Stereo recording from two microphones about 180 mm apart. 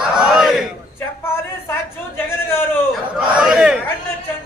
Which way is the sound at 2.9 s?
5° right (ahead or behind).